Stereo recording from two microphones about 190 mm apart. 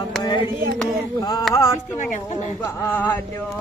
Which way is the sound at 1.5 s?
15° left (ahead or behind).